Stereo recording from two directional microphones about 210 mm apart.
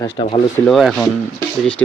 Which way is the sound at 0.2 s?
30° left (ahead or behind).